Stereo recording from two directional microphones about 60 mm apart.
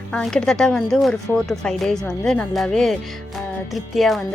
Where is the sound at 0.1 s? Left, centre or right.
Centre.